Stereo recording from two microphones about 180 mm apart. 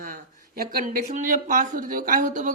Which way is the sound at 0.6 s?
55° right (ahead or behind).